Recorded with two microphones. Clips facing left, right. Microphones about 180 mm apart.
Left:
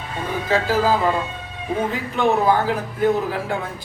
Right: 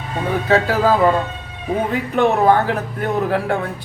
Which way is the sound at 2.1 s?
60° right (ahead or behind).